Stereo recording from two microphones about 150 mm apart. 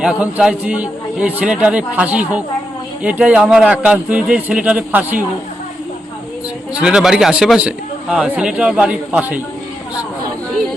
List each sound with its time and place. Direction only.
0.0 s a man's voice: 5° right (ahead or behind)
6.8 s a man's voice: 5° right (ahead or behind)